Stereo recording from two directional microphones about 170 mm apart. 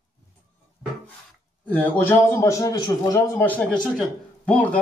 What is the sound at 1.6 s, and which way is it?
A man's voice, 10° left (ahead or behind).